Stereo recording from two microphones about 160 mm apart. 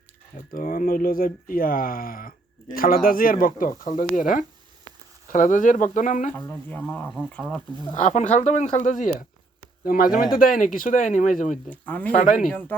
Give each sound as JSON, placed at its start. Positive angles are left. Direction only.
{"t": 0.3, "sound": "speech", "side_deg": 60}
{"t": 6.3, "sound": "speech", "side_deg": 10}
{"t": 7.9, "sound": "speech", "side_deg": 50}
{"t": 9.8, "sound": "speech", "side_deg": 65}
{"t": 11.7, "sound": "speech", "side_deg": 10}
{"t": 12.1, "sound": "speech", "side_deg": 55}
{"t": 12.5, "sound": "speech", "side_deg": 10}